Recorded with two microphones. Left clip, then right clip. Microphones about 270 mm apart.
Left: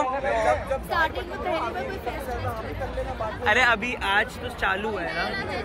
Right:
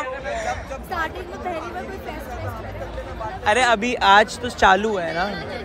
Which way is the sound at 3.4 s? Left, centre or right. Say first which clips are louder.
Right 3 dB; centre.